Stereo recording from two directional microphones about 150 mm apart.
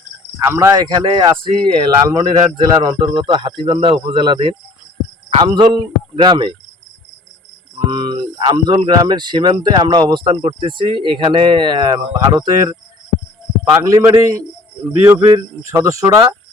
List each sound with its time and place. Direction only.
0.4 s speech: 20° right (ahead or behind)
7.9 s speech: 30° right (ahead or behind)
13.7 s speech: 25° right (ahead or behind)